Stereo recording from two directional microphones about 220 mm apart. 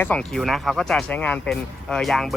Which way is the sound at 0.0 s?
5° left (ahead or behind).